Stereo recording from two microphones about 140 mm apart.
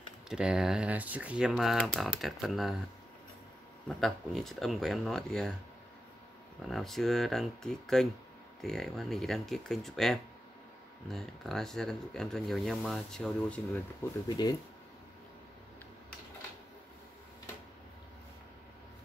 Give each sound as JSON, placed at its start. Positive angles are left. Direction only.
{"t": 0.3, "sound": "speech", "side_deg": -5}
{"t": 4.0, "sound": "speech", "side_deg": 0}
{"t": 6.7, "sound": "speech", "side_deg": 0}
{"t": 14.3, "sound": "speech", "side_deg": 30}